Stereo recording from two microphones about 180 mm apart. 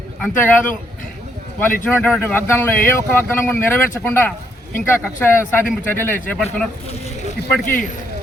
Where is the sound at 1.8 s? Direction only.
5° left (ahead or behind).